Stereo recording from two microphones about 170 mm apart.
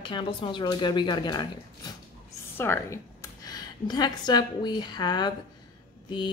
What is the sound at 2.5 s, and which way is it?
A woman's voice, 15° left (ahead or behind).